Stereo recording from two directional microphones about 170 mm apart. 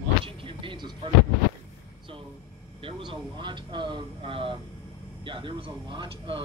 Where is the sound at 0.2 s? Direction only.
30° right (ahead or behind).